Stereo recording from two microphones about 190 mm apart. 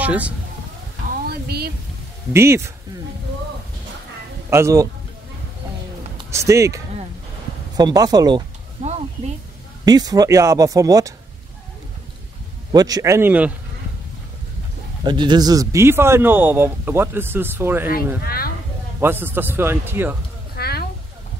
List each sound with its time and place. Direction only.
0.0 s speech: 5° right (ahead or behind)
1.2 s a sound: 55° right (ahead or behind)
2.3 s speech: 15° right (ahead or behind)
4.5 s speech: 15° right (ahead or behind)
6.3 s speech: 15° right (ahead or behind)
8.8 s a sound: 35° right (ahead or behind)
9.8 s speech: 20° right (ahead or behind)
12.7 s speech: 20° right (ahead or behind)
15.0 s speech: 25° right (ahead or behind)
18.2 s speech: 50° left (ahead or behind)
18.9 s speech: 10° right (ahead or behind)
20.5 s a sound: 55° left (ahead or behind)